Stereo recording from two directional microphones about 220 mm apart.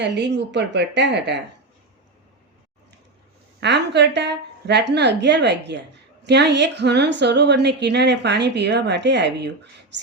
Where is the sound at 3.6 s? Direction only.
50° right (ahead or behind).